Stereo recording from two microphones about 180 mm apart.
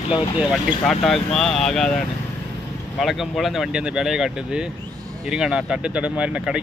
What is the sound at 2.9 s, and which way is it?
Speech, centre (ahead or behind).